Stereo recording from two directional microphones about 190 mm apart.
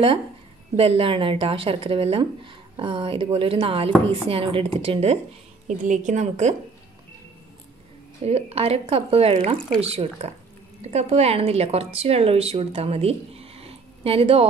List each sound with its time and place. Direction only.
0.7 s a woman's voice: 30° right (ahead or behind)
8.3 s a woman's voice: 30° right (ahead or behind)